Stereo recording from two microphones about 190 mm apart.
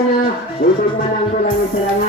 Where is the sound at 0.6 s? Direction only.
55° left (ahead or behind).